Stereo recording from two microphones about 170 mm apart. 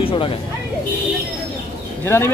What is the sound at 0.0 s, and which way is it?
Speech, 30° left (ahead or behind).